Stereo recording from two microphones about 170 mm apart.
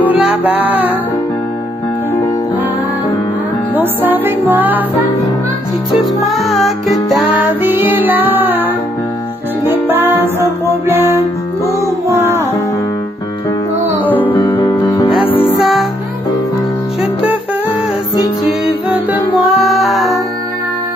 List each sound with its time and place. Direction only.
0.4 s music: 10° right (ahead or behind)
3.7 s music: 10° right (ahead or behind)
6.2 s music: centre (ahead or behind)
7.4 s music: 10° right (ahead or behind)
14.0 s music: 10° left (ahead or behind)
15.3 s music: 30° left (ahead or behind)
15.6 s music: centre (ahead or behind)
18.4 s music: 5° right (ahead or behind)